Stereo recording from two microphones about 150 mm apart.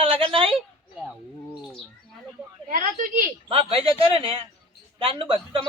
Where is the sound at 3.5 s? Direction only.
40° right (ahead or behind).